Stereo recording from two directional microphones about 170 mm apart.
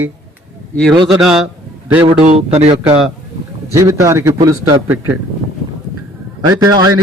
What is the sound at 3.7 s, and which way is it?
A man's voice, 20° right (ahead or behind).